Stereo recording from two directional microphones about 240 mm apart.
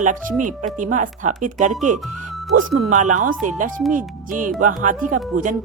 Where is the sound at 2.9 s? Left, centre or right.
Right.